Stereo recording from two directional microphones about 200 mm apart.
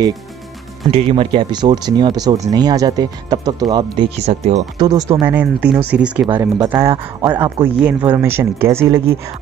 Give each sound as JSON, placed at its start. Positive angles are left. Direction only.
{"t": 0.9, "sound": "speech", "side_deg": -30}
{"t": 4.3, "sound": "speech", "side_deg": -35}
{"t": 4.7, "sound": "speech", "side_deg": -20}
{"t": 5.3, "sound": "speech", "side_deg": -5}